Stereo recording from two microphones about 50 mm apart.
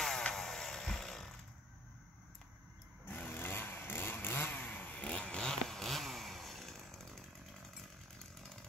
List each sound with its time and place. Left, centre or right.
0.3 s chainsaw: centre
3.3 s motorcycle: left; by 7.9 s centre